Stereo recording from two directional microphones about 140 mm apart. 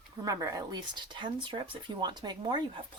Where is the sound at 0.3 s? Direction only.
25° right (ahead or behind).